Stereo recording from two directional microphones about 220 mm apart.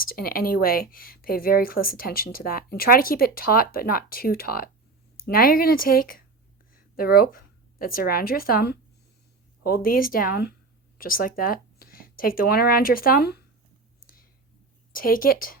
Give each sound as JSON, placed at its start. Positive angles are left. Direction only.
{"t": 0.0, "sound": "speech", "side_deg": 40}
{"t": 14.9, "sound": "speech", "side_deg": 40}